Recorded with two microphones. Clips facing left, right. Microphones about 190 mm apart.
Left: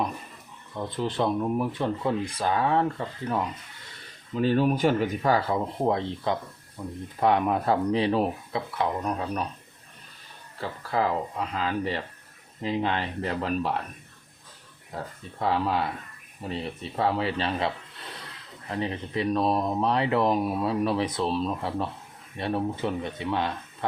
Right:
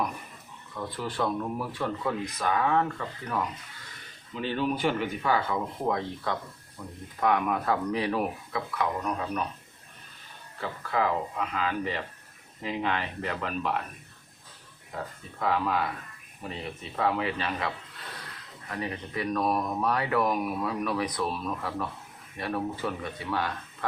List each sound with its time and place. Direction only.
0.8 s speech: 25° left (ahead or behind)
4.4 s speech: 45° left (ahead or behind)
10.6 s speech: 35° left (ahead or behind)
14.9 s speech: 35° left (ahead or behind)
16.9 s speech: 30° left (ahead or behind)
18.7 s speech: 25° left (ahead or behind)